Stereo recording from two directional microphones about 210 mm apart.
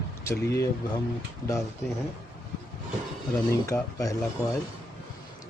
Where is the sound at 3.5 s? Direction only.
15° left (ahead or behind).